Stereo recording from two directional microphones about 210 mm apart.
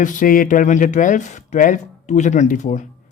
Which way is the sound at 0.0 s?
40° left (ahead or behind).